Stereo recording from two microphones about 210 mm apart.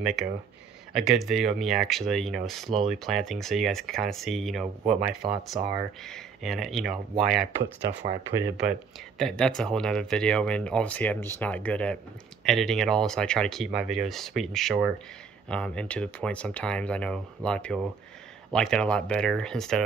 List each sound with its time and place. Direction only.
0.0 s speech: centre (ahead or behind)
7.9 s speech: 55° right (ahead or behind)
8.4 s speech: 10° right (ahead or behind)
9.2 s speech: 5° left (ahead or behind)